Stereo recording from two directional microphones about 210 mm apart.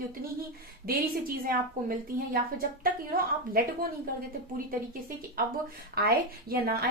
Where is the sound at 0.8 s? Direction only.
45° right (ahead or behind).